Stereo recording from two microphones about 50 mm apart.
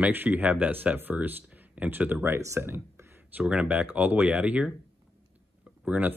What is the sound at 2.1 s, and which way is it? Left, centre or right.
Speech, right.